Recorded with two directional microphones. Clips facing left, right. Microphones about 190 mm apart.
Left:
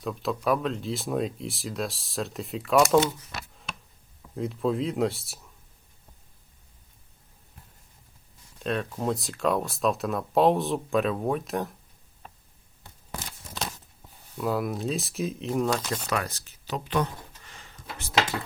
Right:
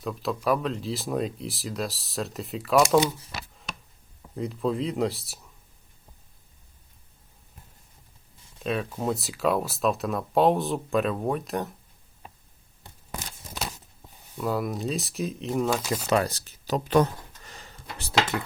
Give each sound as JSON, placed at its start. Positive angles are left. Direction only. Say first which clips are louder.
{"t": 0.0, "sound": "speech", "louder": "even", "side_deg": 0}
{"t": 3.3, "sound": "chopping", "louder": "right 1 dB", "side_deg": 0}
{"t": 4.4, "sound": "speech", "louder": "even", "side_deg": 0}
{"t": 8.6, "sound": "speech", "louder": "even", "side_deg": -5}
{"t": 13.1, "sound": "scissors", "louder": "right 1 dB", "side_deg": -15}
{"t": 14.3, "sound": "speech", "louder": "even", "side_deg": 0}
{"t": 16.0, "sound": "speech", "louder": "right 6 dB", "side_deg": -30}